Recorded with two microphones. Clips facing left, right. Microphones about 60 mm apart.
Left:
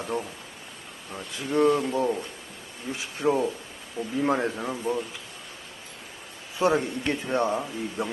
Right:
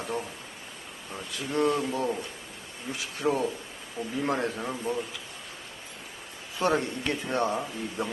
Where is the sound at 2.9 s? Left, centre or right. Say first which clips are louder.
Left 2 dB; left.